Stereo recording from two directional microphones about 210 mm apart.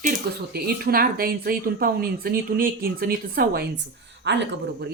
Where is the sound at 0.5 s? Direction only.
45° right (ahead or behind).